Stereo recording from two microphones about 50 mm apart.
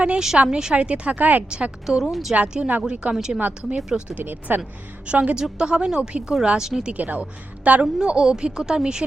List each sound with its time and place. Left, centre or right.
0.4 s a woman's voice: centre; by 1.5 s right
1.5 s a woman's voice: centre
4.2 s speech: right
5.0 s a woman's voice: right
6.9 s a woman's voice: right
7.9 s speech: centre